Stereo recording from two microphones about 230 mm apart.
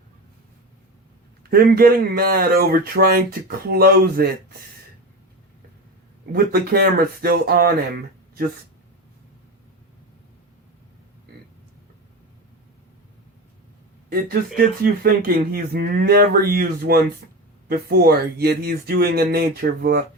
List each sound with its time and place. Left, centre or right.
1.5 s speech: right
6.3 s speech: right
14.1 s speech: right